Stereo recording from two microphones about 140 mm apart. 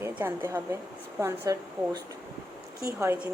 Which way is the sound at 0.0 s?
20° right (ahead or behind).